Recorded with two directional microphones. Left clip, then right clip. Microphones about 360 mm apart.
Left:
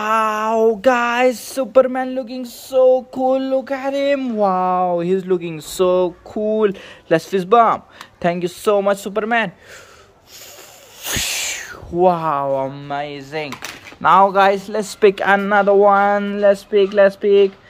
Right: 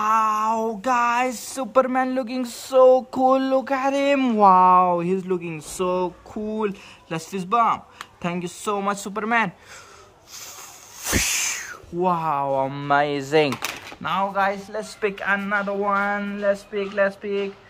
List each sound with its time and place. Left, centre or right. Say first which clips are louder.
0.0 s speech: left 2 dB; centre
11.1 s speech: left 1 dB; centre
14.0 s a man's voice: left 11 dB; centre